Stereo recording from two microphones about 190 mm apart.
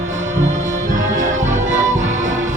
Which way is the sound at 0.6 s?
40° right (ahead or behind).